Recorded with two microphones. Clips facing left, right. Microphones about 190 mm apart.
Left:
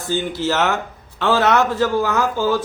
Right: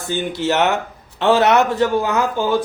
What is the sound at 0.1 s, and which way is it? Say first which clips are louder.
Speech: right 1 dB; 20° right (ahead or behind).